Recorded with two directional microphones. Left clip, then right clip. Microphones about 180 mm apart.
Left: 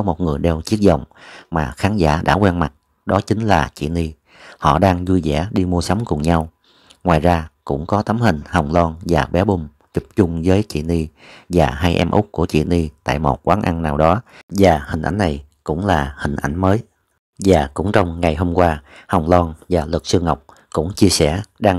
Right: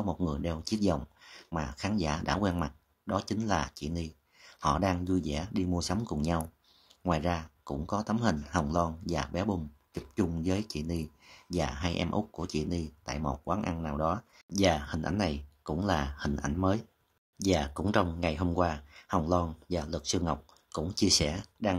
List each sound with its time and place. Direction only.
0.0 s speech: 40° left (ahead or behind)
17.4 s speech: 40° left (ahead or behind)